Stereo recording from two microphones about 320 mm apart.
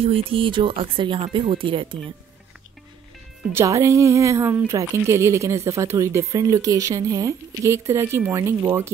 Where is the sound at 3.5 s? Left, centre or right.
Centre.